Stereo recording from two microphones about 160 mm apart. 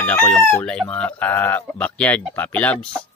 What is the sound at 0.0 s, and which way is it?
Speech, 5° left (ahead or behind).